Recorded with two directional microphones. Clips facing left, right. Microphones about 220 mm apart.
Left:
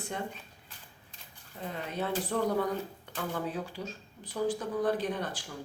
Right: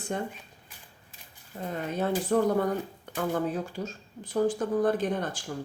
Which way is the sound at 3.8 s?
45° right (ahead or behind).